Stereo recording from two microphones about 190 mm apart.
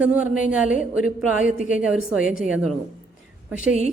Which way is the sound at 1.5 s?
45° left (ahead or behind).